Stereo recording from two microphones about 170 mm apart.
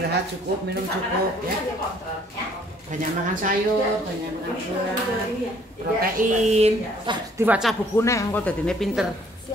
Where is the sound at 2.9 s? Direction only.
45° right (ahead or behind).